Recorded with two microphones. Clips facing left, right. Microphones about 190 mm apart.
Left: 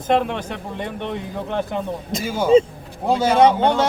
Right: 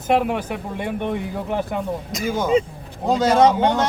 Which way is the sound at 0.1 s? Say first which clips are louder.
Even; 10° right (ahead or behind).